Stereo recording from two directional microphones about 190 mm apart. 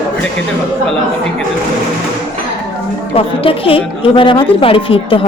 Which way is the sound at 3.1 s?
30° left (ahead or behind).